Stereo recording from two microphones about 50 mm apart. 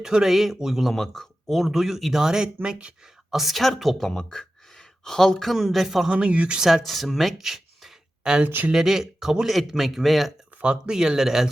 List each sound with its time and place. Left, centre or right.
0.0 s speech: centre
0.9 s speech: centre
3.3 s speech: centre
4.1 s speech: centre
6.1 s speech: right
6.6 s speech: centre
10.6 s speech: centre